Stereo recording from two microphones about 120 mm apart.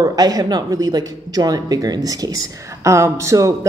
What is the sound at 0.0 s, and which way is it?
Speech, 30° right (ahead or behind).